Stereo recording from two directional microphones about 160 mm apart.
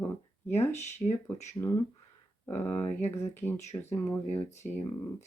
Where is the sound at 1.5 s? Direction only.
20° left (ahead or behind).